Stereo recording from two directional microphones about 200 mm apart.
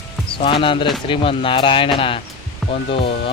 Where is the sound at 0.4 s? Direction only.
25° left (ahead or behind).